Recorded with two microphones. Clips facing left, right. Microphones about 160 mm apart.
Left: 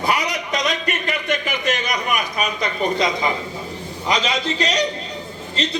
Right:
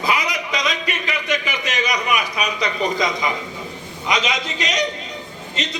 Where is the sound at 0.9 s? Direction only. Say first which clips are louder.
Left 1 dB; 50° left (ahead or behind).